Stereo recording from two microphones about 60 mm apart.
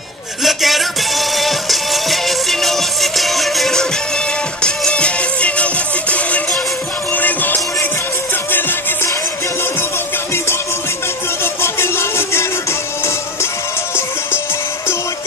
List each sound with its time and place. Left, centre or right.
0.4 s music: centre
4.6 s music: centre; by 8.7 s left
11.4 s music: left